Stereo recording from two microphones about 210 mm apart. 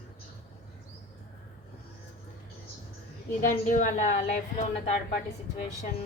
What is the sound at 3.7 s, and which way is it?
Speech, 35° left (ahead or behind).